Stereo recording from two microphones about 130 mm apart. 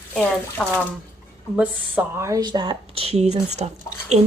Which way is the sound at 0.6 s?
10° left (ahead or behind).